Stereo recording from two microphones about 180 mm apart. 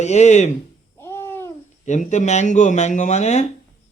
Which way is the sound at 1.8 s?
40° left (ahead or behind).